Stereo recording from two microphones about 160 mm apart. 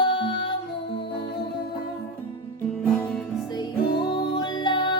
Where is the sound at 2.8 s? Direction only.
5° left (ahead or behind).